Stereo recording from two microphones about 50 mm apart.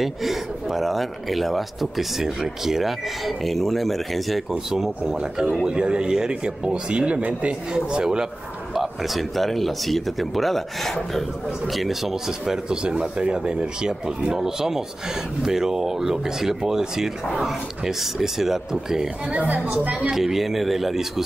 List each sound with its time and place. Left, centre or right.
0.0 s speech: centre
4.5 s speech: centre; by 7.5 s right
7.7 s speech: centre
8.7 s speech: centre
19.3 s a woman's voice: right
20.1 s speech: centre